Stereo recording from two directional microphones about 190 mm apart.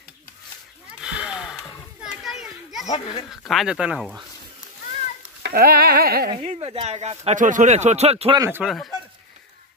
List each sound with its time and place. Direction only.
1.0 s a sound: 5° right (ahead or behind)
2.2 s children playing: centre (ahead or behind)
2.9 s speech: 20° left (ahead or behind)
3.3 s speech: centre (ahead or behind)
5.4 s a sound: 55° right (ahead or behind)
6.3 s speech: 35° right (ahead or behind)
8.4 s speech: 10° right (ahead or behind)
8.6 s speech: centre (ahead or behind)